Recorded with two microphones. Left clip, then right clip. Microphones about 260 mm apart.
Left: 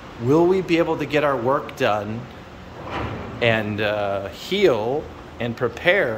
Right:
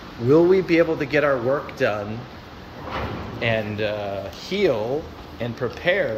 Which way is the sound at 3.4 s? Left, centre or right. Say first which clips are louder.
Left 3 dB; centre.